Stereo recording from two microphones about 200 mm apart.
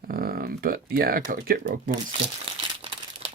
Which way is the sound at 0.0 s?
50° right (ahead or behind).